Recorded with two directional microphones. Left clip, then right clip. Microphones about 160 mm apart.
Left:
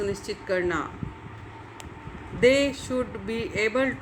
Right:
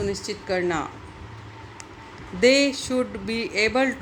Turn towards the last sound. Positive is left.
turn(degrees=-30)  # may be behind; listen again after turning